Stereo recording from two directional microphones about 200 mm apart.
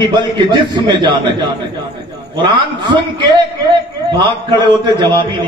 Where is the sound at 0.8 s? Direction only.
25° right (ahead or behind).